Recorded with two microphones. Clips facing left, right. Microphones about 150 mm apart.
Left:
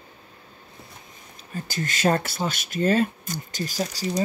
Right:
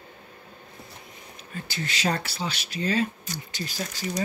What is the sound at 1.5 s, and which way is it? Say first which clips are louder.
Speech: left 3 dB; 45° left (ahead or behind).